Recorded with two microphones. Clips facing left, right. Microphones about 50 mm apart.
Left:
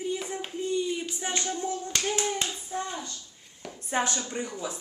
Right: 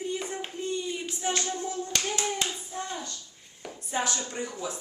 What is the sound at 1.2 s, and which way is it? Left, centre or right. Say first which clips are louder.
Speech: right 1 dB; centre.